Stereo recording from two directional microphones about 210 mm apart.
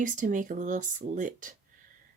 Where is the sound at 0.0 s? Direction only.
35° right (ahead or behind).